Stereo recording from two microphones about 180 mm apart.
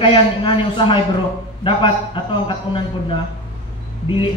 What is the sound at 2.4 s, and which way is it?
Speech, 25° left (ahead or behind).